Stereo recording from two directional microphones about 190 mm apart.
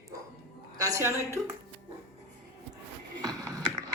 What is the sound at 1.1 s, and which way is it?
Speech, 15° left (ahead or behind).